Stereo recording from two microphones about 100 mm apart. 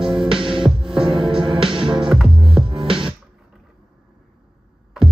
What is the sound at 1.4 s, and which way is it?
Music, 60° right (ahead or behind).